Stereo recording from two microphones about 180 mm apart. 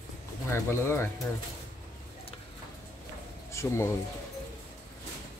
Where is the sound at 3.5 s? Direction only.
15° left (ahead or behind).